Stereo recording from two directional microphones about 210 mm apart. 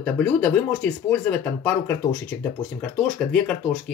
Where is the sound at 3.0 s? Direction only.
Centre (ahead or behind).